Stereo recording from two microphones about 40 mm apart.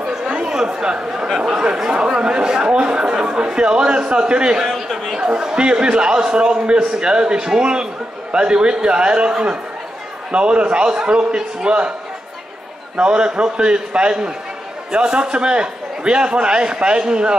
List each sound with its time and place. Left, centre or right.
0.3 s chatter: centre
1.4 s a man's voice: centre
4.6 s a sound: centre
5.3 s a man's voice: right
12.9 s a man's voice: right